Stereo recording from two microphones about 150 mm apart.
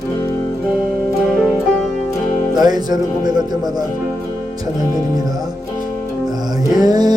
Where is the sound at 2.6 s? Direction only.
25° right (ahead or behind).